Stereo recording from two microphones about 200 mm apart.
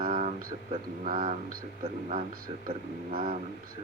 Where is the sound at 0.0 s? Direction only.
40° right (ahead or behind).